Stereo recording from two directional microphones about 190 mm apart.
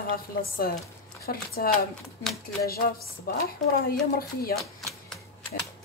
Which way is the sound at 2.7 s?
50° left (ahead or behind).